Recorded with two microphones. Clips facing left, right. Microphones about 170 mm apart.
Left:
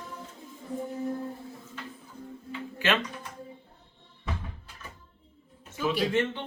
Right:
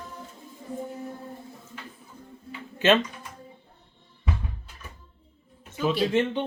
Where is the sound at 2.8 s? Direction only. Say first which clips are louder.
Right 7 dB; 20° right (ahead or behind).